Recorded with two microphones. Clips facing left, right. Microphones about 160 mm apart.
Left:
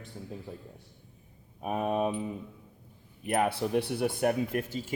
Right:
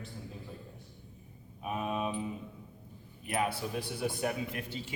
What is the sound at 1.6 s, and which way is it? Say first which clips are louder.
Speech: left 5 dB; 45° left (ahead or behind).